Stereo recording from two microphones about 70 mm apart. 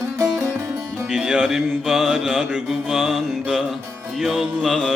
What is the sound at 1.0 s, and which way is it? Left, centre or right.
Mantra, centre.